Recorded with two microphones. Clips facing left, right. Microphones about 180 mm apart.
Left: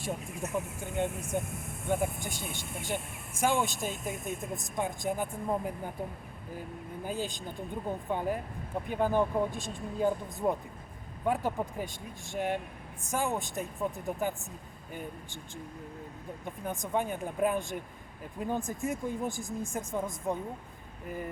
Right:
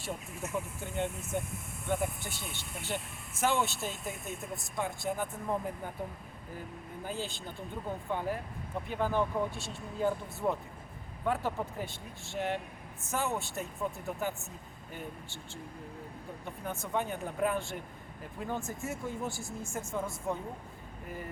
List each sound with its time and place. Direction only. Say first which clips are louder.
0.4 s speech: left 2 dB; 35° left (ahead or behind)
0.8 s speech: left 3 dB; 15° left (ahead or behind)
16.6 s speech: left 2 dB; 15° left (ahead or behind)